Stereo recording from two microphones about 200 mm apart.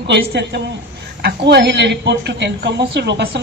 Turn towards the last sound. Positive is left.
turn(degrees=-55)  # may be behind; listen again after turning